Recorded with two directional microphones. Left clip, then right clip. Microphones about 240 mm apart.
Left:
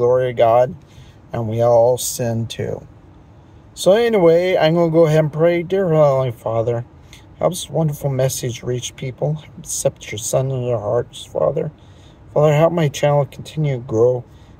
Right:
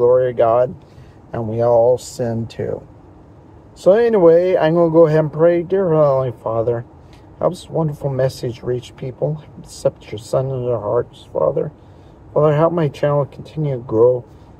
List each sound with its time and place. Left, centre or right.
0.0 s speech: centre
3.7 s speech: centre
8.7 s speech: centre
9.0 s speech: centre